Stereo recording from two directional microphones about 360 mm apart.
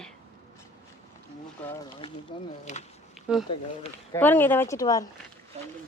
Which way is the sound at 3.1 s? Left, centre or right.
Centre.